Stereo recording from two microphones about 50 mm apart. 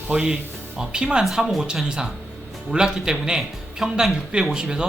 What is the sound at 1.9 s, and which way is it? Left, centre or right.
Speech, centre.